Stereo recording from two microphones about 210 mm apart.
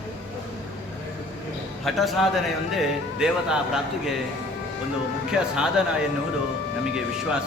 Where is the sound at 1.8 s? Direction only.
Centre (ahead or behind).